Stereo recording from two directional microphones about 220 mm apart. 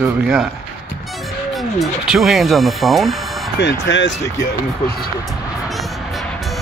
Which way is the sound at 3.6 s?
55° left (ahead or behind).